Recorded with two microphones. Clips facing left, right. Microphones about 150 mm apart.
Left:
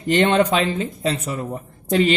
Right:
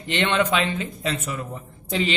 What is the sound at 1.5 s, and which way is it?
Speech, 50° left (ahead or behind).